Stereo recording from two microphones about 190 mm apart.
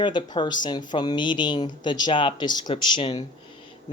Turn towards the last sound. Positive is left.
turn(degrees=25)  # may be behind; listen again after turning